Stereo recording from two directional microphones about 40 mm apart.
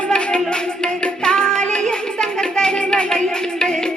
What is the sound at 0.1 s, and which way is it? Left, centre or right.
Music, left.